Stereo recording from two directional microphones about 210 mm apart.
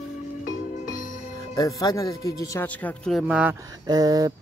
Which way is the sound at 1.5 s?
15° left (ahead or behind).